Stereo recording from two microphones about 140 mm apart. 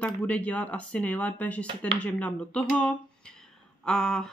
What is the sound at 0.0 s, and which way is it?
Speech, 10° left (ahead or behind).